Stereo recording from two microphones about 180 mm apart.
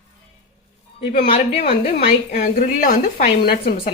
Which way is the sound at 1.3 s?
30° left (ahead or behind).